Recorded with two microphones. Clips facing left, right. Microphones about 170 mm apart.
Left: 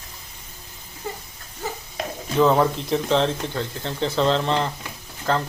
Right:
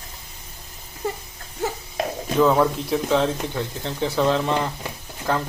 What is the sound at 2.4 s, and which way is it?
Speech, centre (ahead or behind).